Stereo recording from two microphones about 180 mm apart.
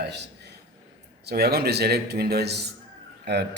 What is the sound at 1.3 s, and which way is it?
Speech, 60° right (ahead or behind).